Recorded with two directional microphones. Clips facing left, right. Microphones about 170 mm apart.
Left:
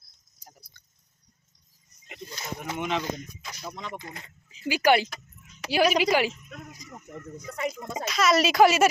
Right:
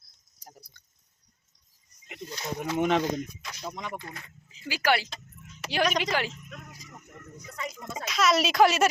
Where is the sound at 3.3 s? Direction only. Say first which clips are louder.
Right 1 dB; centre (ahead or behind).